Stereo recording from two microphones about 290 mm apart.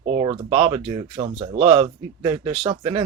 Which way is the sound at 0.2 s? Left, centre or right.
Centre.